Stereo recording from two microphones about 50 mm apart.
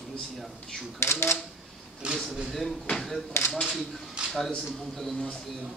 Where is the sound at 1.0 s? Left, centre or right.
Left.